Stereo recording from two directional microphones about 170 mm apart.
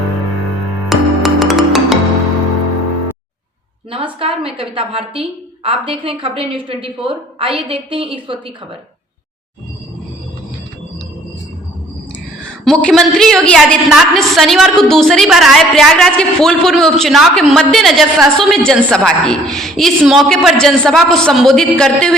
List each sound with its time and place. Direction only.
0.9 s music: centre (ahead or behind)
3.9 s a woman's voice: 35° right (ahead or behind)
12.6 s a woman's voice: 5° left (ahead or behind)